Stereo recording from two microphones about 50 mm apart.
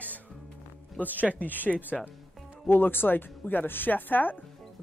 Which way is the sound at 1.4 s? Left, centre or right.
Left.